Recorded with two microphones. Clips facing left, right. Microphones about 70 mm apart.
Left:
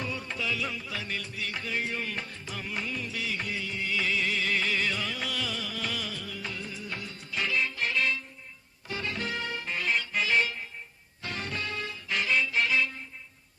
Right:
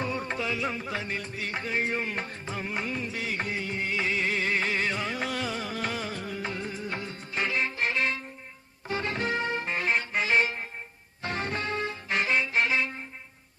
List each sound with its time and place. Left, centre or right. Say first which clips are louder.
0.0 s music: right 4 dB; right